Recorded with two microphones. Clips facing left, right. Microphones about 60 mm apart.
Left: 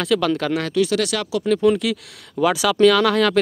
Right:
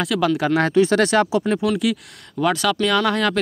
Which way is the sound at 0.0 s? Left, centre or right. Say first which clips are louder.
Even; centre.